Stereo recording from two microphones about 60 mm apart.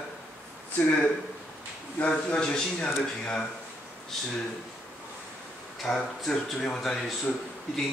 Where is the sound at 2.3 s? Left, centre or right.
Centre.